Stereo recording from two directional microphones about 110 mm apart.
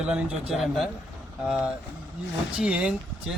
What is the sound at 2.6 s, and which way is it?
Speech, 10° right (ahead or behind).